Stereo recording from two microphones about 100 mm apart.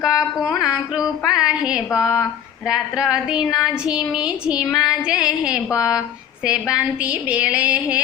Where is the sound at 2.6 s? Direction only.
5° right (ahead or behind).